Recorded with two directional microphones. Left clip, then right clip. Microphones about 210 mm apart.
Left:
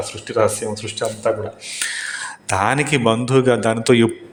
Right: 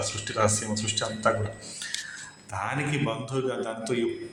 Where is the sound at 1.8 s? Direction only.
50° left (ahead or behind).